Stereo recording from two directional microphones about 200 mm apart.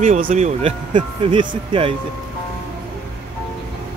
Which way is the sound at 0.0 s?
40° right (ahead or behind).